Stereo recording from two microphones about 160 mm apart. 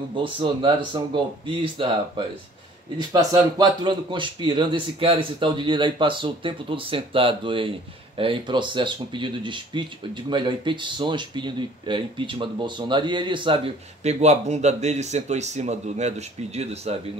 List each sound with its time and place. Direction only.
0.1 s speech: 30° right (ahead or behind)
14.0 s speech: 45° right (ahead or behind)